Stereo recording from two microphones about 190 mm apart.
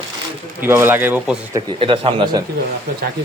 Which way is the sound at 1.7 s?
30° right (ahead or behind).